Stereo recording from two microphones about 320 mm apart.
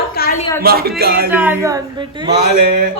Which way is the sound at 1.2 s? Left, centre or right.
Centre.